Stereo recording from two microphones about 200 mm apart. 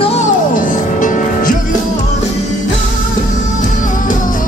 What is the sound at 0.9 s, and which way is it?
Music, 40° left (ahead or behind).